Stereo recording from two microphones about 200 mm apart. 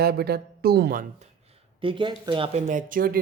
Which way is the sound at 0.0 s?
50° right (ahead or behind).